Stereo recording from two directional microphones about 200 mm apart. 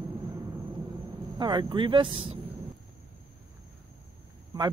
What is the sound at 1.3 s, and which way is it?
Speech, 20° right (ahead or behind).